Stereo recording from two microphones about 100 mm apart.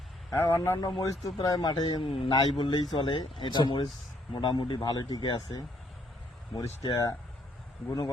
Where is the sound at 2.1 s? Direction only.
55° left (ahead or behind).